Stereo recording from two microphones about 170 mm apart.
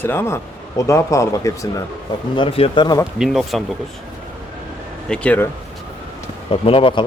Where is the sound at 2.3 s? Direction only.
30° left (ahead or behind).